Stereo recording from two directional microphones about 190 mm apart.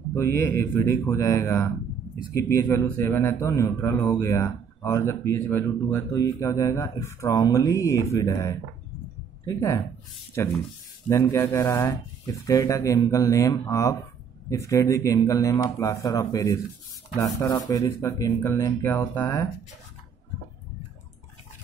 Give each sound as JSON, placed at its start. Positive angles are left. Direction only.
{"t": 0.1, "sound": "a man's voice", "side_deg": 15}